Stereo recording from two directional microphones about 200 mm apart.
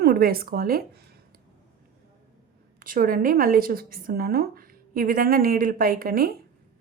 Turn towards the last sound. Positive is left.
turn(degrees=-45)  # may be behind; listen again after turning